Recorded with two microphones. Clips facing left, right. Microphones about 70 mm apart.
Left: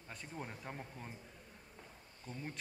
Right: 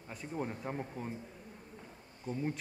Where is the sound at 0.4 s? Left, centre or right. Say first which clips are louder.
Right 9 dB; centre.